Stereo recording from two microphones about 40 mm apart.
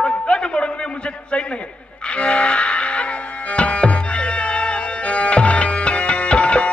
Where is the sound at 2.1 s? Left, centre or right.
Left.